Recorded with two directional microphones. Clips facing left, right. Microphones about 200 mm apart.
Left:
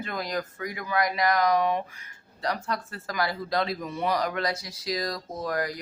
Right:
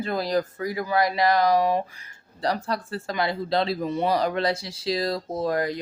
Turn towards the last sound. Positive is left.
turn(degrees=-25)  # may be behind; listen again after turning